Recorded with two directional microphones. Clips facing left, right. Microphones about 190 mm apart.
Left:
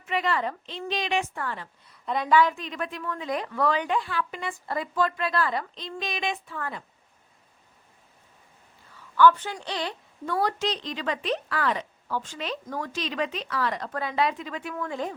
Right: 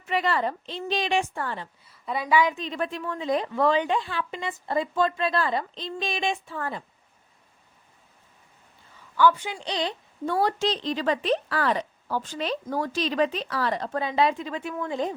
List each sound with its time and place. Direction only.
0.0 s speech: 35° right (ahead or behind)
1.8 s a woman's voice: 5° right (ahead or behind)
2.6 s speech: 30° right (ahead or behind)
9.1 s a woman's voice: 10° right (ahead or behind)